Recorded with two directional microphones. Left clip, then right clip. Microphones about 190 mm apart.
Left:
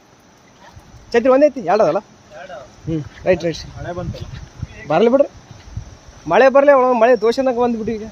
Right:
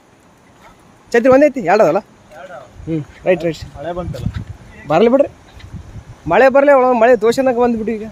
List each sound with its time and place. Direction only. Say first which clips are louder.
1.1 s speech: right 2 dB; 25° right (ahead or behind)
2.9 s speech: right 2 dB; 5° right (ahead or behind)
3.8 s speech: right 4 dB; 30° right (ahead or behind)
4.9 s a man's voice: right 2 dB; 15° right (ahead or behind)